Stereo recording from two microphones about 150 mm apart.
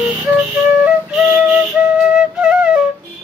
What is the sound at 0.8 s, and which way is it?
Flute, 5° right (ahead or behind).